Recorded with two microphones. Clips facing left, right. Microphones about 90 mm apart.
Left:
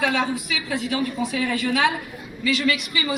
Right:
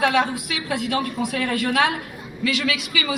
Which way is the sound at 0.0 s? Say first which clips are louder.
Right 3 dB; 60° right (ahead or behind).